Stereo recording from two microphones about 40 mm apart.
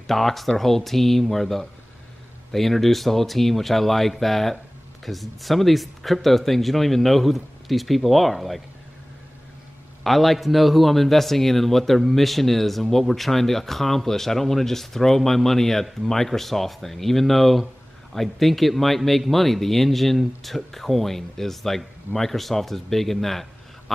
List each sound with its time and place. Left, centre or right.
0.0 s a man's voice: centre
10.0 s a man's voice: centre